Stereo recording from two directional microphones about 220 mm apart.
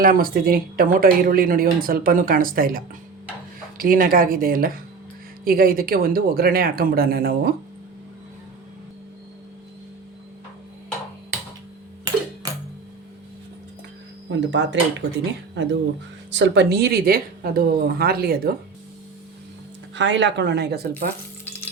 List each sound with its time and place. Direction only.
0.0 s a woman's voice: 40° right (ahead or behind)
14.3 s a woman's voice: 55° right (ahead or behind)
20.0 s a woman's voice: 55° right (ahead or behind)
21.4 s frying: 10° left (ahead or behind)